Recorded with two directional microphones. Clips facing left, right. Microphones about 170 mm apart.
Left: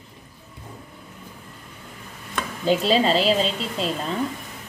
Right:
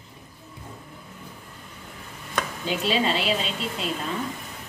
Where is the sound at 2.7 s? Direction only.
35° left (ahead or behind).